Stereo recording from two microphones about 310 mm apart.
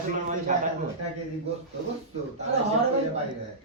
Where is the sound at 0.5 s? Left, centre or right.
Right.